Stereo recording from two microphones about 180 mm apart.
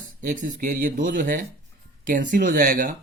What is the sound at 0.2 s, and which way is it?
A man's voice, 45° right (ahead or behind).